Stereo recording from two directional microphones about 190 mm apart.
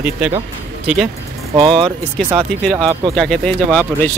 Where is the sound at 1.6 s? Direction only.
25° right (ahead or behind).